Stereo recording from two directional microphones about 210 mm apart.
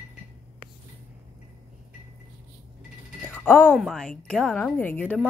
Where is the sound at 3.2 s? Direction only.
10° left (ahead or behind).